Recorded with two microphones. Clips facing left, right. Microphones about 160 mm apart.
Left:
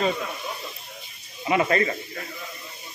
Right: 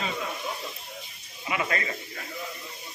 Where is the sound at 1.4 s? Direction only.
35° left (ahead or behind).